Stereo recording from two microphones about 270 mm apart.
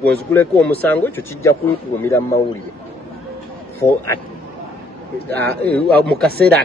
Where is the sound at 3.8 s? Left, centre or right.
Centre.